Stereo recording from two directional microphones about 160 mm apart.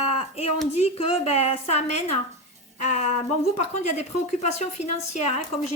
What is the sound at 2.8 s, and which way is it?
A woman's voice, 45° left (ahead or behind).